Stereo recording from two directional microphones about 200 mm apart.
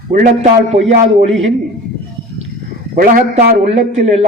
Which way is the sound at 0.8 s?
35° right (ahead or behind).